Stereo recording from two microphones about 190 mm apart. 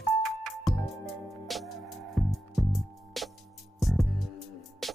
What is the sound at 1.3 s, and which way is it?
Music, centre (ahead or behind).